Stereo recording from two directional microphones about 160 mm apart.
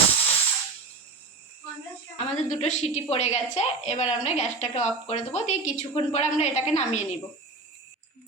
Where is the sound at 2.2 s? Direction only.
40° left (ahead or behind).